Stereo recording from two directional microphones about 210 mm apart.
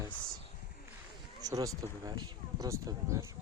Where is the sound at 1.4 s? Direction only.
15° right (ahead or behind).